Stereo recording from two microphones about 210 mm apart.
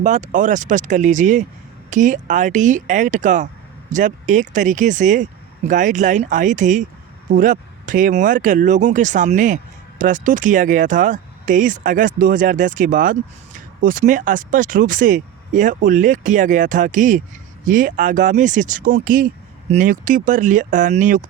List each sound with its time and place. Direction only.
0.0 s speech: 35° right (ahead or behind)